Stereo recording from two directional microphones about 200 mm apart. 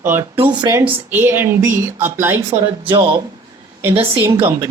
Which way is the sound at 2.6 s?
25° right (ahead or behind).